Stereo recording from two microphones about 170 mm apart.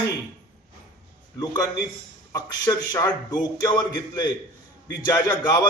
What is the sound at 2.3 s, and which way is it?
A man's voice, 20° left (ahead or behind).